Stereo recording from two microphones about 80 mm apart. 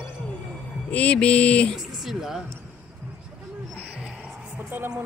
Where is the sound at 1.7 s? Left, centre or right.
Centre.